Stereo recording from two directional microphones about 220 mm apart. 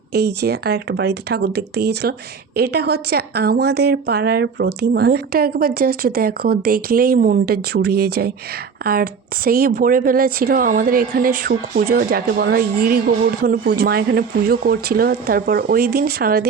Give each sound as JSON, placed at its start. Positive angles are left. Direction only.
{"t": 0.1, "sound": "speech", "side_deg": -45}